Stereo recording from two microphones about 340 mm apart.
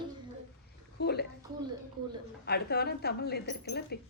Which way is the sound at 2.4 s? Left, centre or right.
Left.